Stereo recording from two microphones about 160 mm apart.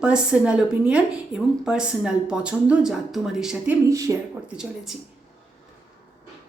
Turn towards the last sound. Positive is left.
turn(degrees=-5)  # may be behind; listen again after turning